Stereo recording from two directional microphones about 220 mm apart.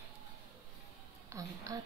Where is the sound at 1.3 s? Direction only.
15° right (ahead or behind).